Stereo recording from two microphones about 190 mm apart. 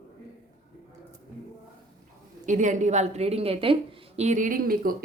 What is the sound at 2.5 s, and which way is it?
A woman's voice, 40° right (ahead or behind).